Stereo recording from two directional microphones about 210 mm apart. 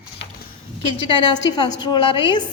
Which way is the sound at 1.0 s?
20° left (ahead or behind).